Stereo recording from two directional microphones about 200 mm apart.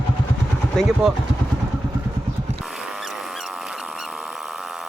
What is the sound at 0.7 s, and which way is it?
Speech, centre (ahead or behind).